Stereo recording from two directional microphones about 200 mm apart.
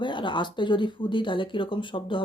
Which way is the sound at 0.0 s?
25° left (ahead or behind).